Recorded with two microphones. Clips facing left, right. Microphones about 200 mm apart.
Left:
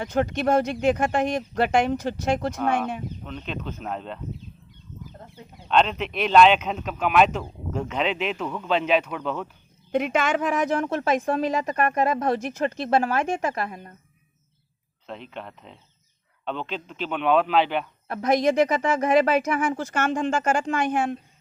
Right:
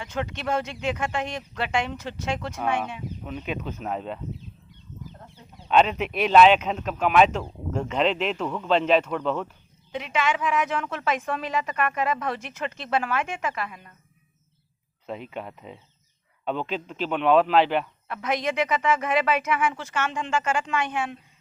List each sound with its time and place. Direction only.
0.0 s speech: 40° left (ahead or behind)
3.2 s speech: 5° right (ahead or behind)
5.6 s speech: 5° right (ahead or behind)
9.9 s a woman's voice: 50° left (ahead or behind)
15.0 s speech: 5° right (ahead or behind)
18.1 s a woman's voice: 40° left (ahead or behind)